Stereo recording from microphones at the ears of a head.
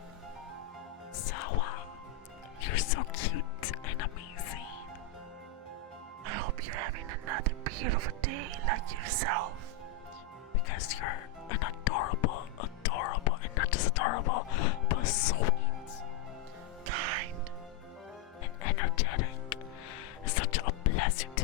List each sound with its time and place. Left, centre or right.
1.1 s music: left
6.2 s music: right
10.7 s music: left
16.8 s music: right
18.6 s music: left